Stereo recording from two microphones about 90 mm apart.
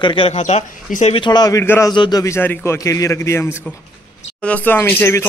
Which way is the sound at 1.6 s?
30° left (ahead or behind).